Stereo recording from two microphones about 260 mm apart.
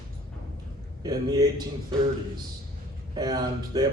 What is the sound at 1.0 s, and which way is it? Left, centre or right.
Speech, centre.